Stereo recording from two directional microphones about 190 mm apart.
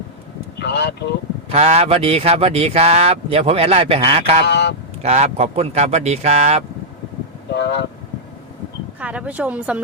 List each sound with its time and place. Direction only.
0.6 s vehicle: 65° left (ahead or behind)
1.5 s speech: 35° right (ahead or behind)
4.4 s speech: 65° left (ahead or behind)
5.0 s speech: 35° right (ahead or behind)
7.5 s speech: 65° left (ahead or behind)
9.0 s speech: 5° right (ahead or behind)